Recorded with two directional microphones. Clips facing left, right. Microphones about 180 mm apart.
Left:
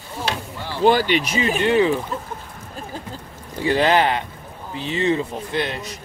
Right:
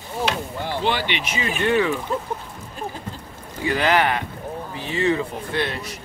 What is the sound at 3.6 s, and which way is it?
Speech, 30° left (ahead or behind).